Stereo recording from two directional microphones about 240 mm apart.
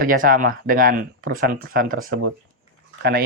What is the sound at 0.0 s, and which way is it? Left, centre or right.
Speech, right.